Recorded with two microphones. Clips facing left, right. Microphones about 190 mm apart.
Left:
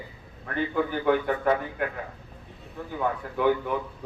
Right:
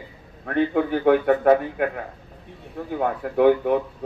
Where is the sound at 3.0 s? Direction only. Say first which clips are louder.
Right 7 dB; 55° right (ahead or behind).